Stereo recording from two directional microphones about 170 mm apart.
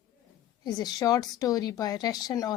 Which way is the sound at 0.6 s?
20° left (ahead or behind).